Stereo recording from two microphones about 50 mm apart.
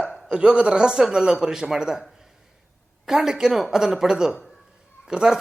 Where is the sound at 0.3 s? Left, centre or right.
Centre.